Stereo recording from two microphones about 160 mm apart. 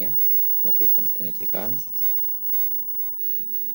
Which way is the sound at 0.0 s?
20° left (ahead or behind).